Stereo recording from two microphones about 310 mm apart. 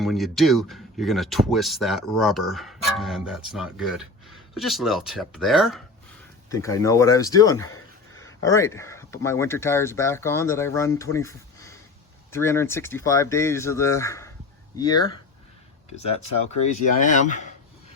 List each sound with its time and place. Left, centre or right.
0.0 s speech: centre
6.5 s speech: centre